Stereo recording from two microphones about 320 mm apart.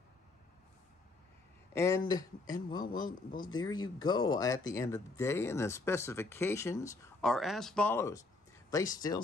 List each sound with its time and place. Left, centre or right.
1.7 s speech: centre
3.1 s speech: left
3.4 s speech: centre